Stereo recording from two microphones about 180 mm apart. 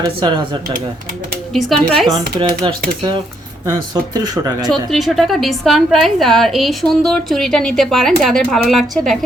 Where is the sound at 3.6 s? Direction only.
20° right (ahead or behind).